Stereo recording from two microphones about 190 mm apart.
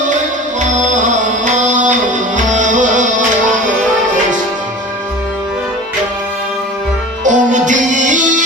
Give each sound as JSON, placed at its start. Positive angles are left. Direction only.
{"t": 0.6, "sound": "music", "side_deg": -40}
{"t": 7.3, "sound": "music", "side_deg": -40}